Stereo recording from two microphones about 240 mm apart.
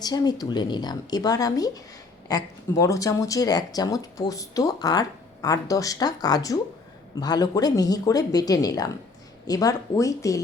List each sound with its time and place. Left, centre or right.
0.0 s speech: centre